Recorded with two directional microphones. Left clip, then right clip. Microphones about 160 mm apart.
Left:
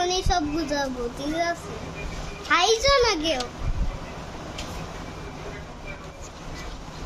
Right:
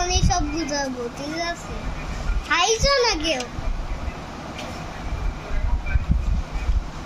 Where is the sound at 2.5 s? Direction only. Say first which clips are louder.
Even; 20° left (ahead or behind).